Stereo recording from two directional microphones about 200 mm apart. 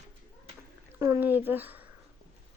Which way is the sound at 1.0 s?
10° right (ahead or behind).